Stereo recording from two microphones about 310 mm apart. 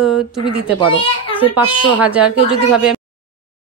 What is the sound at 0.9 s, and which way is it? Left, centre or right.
Speech, centre.